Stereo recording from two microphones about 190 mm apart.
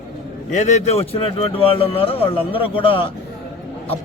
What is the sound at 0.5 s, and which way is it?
Speech, 40° left (ahead or behind).